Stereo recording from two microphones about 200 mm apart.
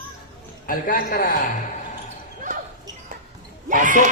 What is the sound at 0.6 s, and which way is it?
Speech, 45° left (ahead or behind).